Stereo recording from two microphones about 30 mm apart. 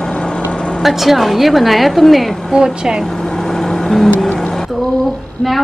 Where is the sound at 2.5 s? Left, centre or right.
Right.